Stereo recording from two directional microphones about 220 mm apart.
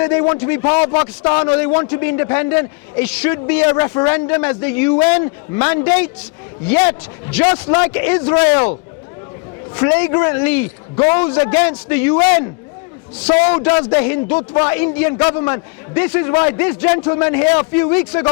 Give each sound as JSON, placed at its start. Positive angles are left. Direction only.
{"t": 0.0, "sound": "a man's voice", "side_deg": 20}
{"t": 9.7, "sound": "a man's voice", "side_deg": 20}
{"t": 13.5, "sound": "a man's voice", "side_deg": 20}